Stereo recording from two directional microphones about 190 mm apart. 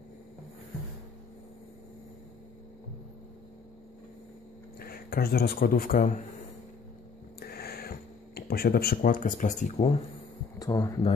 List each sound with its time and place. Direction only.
4.7 s speech: 50° left (ahead or behind)
7.3 s a sound: 55° left (ahead or behind)
8.4 s speech: 55° left (ahead or behind); by 9.9 s 35° left (ahead or behind)
10.6 s speech: 20° left (ahead or behind)